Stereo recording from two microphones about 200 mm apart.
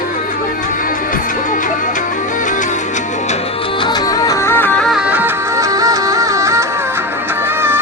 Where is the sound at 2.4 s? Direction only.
40° left (ahead or behind).